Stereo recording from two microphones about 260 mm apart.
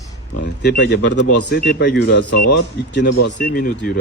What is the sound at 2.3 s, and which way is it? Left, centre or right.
Speech, left.